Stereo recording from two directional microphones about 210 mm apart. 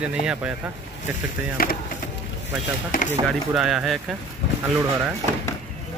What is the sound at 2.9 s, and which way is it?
Speech, 40° left (ahead or behind).